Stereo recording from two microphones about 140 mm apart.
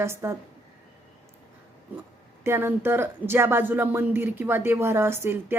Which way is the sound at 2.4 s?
15° right (ahead or behind).